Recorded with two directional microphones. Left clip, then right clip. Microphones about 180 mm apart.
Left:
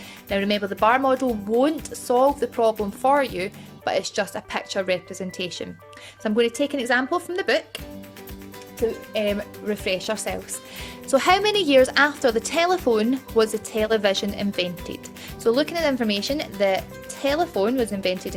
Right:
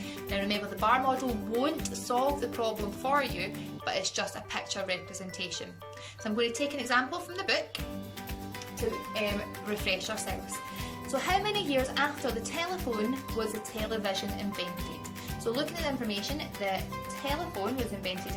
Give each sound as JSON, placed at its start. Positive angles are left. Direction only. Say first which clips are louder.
{"t": 0.3, "sound": "speech", "louder": "left 9 dB", "side_deg": 50}
{"t": 6.2, "sound": "speech", "louder": "left 9 dB", "side_deg": 45}
{"t": 9.1, "sound": "speech", "louder": "left 8 dB", "side_deg": 45}
{"t": 11.1, "sound": "a woman's voice", "louder": "left 11 dB", "side_deg": 60}